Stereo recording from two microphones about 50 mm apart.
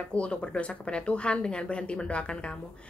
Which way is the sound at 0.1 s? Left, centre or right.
Left.